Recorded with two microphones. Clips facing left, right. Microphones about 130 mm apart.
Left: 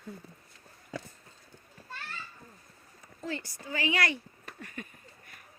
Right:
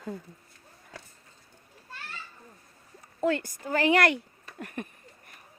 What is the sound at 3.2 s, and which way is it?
Speech, 65° right (ahead or behind).